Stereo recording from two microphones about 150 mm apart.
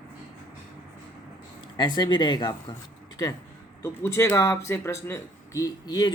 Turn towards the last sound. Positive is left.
turn(degrees=25)  # may be behind; listen again after turning